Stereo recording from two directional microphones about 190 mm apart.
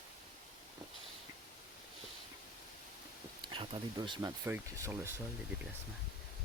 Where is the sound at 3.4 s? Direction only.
25° right (ahead or behind).